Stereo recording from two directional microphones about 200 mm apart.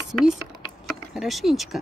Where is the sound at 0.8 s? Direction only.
Centre (ahead or behind).